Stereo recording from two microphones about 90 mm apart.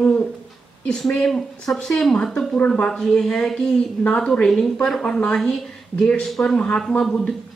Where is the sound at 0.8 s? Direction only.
5° left (ahead or behind).